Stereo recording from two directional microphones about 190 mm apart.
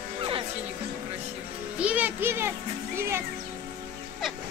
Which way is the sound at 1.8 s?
10° right (ahead or behind).